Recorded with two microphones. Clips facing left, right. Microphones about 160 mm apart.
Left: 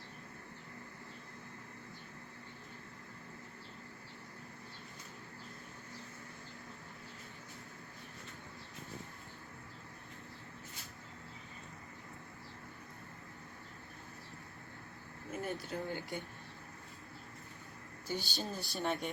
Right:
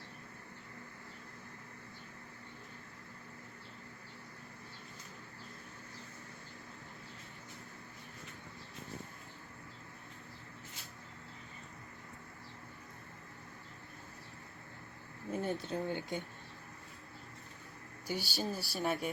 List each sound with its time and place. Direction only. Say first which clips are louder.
15.3 s speech: right 4 dB; 25° right (ahead or behind)
18.1 s speech: right 2 dB; 10° right (ahead or behind)